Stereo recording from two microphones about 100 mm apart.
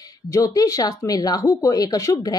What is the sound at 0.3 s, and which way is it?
Speech, 35° left (ahead or behind).